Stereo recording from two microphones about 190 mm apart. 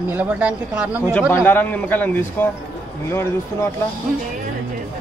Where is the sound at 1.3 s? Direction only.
10° left (ahead or behind).